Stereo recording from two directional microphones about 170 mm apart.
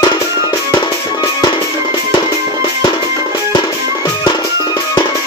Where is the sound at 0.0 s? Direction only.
20° left (ahead or behind).